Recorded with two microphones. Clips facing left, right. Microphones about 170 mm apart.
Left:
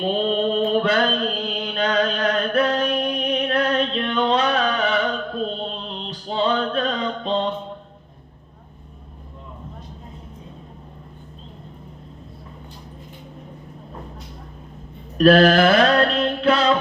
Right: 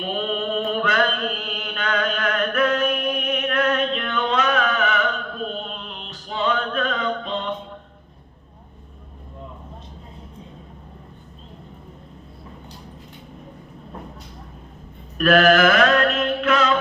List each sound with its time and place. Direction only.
0.0 s mantra: 30° left (ahead or behind)
15.2 s mantra: 30° left (ahead or behind)